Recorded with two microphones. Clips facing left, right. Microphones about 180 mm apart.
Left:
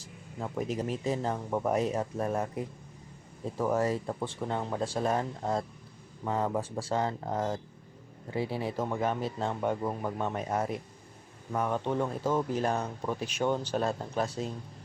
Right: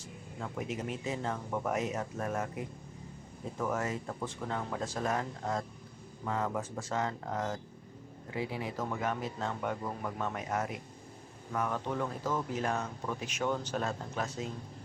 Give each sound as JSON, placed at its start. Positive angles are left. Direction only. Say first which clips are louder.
{"t": 0.7, "sound": "speech", "louder": "left 6 dB", "side_deg": 35}
{"t": 3.6, "sound": "speech", "louder": "left 6 dB", "side_deg": 35}